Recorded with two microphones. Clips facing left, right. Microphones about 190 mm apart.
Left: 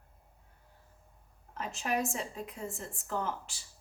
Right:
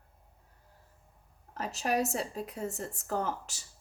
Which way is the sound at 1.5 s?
40° right (ahead or behind).